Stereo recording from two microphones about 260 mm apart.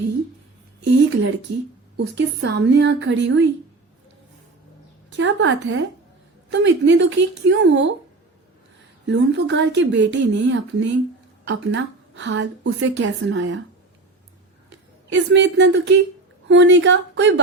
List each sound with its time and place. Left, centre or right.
1.5 s speech: right
2.0 s a woman's voice: right
5.1 s a woman's voice: right
9.0 s a woman's voice: right
14.7 s a woman's voice: right